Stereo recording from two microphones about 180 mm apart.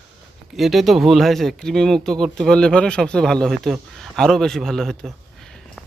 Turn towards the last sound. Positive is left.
turn(degrees=0)  # may be behind; listen again after turning